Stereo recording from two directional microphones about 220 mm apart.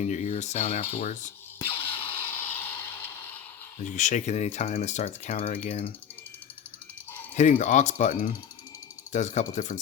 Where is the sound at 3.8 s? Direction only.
35° left (ahead or behind).